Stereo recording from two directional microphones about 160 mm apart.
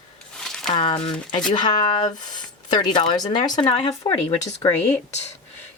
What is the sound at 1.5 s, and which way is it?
A woman's voice, 30° left (ahead or behind).